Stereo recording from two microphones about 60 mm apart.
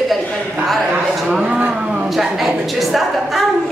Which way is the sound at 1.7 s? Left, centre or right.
Centre.